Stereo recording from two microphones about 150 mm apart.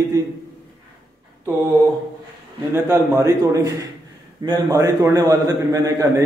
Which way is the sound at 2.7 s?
15° right (ahead or behind).